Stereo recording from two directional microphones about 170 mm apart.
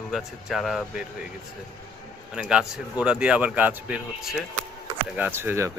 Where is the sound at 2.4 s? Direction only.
5° right (ahead or behind).